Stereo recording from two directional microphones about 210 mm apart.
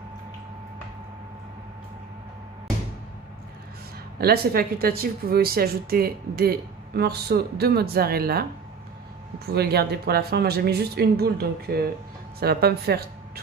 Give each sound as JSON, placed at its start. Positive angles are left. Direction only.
{"t": 4.2, "sound": "speech", "side_deg": -45}
{"t": 9.5, "sound": "speech", "side_deg": -50}